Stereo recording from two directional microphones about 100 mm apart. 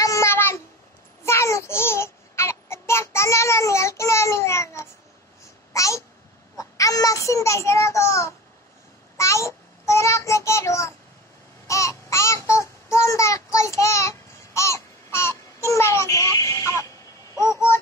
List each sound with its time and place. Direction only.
0.0 s a sound: 30° left (ahead or behind)
1.2 s babbling: 30° left (ahead or behind)
6.5 s a child's voice: 35° left (ahead or behind)
11.6 s babbling: 30° left (ahead or behind)